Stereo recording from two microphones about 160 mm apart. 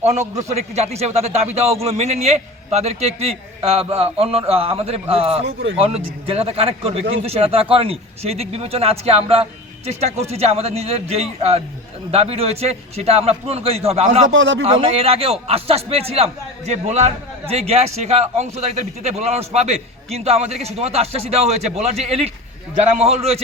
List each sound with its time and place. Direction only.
0.0 s a man's voice: 45° right (ahead or behind)